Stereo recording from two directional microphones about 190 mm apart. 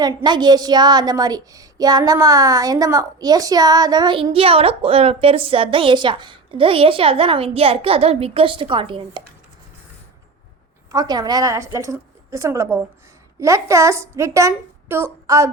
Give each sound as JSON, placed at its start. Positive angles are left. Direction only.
{"t": 0.0, "sound": "a woman's voice", "side_deg": -20}
{"t": 10.9, "sound": "a woman's voice", "side_deg": -20}